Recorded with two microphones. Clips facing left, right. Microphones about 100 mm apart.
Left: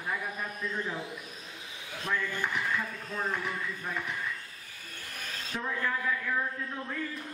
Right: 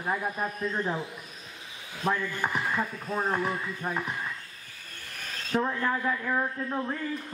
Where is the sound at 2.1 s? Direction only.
40° right (ahead or behind).